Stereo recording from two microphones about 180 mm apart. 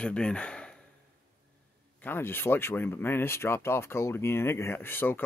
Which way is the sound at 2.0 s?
10° left (ahead or behind).